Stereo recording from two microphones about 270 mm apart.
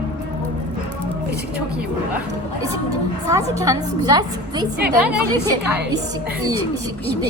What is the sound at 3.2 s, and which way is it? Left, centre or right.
A woman's voice, centre.